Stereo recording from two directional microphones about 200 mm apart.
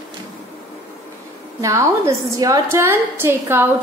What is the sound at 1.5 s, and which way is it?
A woman's voice, 15° right (ahead or behind).